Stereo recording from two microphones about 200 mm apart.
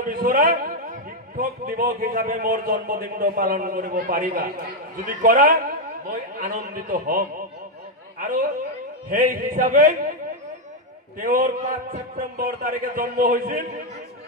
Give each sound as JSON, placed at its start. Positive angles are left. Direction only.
{"t": 0.0, "sound": "a man's voice", "side_deg": -45}
{"t": 11.1, "sound": "a man's voice", "side_deg": -45}